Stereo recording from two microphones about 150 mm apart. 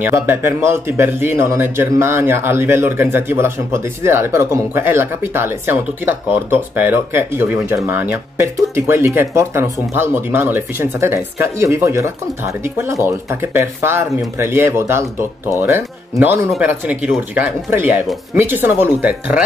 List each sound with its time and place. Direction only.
0.0 s speech: 15° right (ahead or behind)